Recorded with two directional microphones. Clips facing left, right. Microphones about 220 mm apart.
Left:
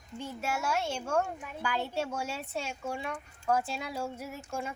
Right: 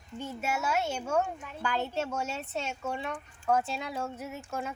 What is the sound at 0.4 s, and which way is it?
Speech, 5° right (ahead or behind).